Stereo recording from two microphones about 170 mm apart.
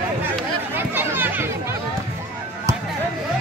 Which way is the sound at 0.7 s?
10° right (ahead or behind).